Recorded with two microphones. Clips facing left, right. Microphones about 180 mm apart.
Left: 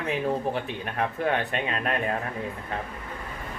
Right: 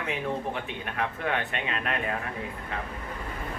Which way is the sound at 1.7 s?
40° left (ahead or behind).